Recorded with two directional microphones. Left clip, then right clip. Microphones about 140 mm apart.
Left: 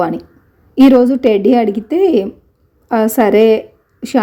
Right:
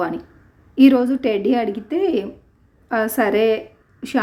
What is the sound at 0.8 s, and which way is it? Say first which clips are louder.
A woman's voice: left 6 dB; 30° left (ahead or behind).